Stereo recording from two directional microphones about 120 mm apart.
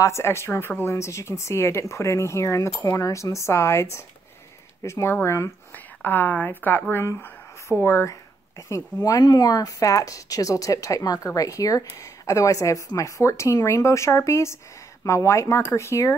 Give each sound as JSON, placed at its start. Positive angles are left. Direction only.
{"t": 0.0, "sound": "speech", "side_deg": 25}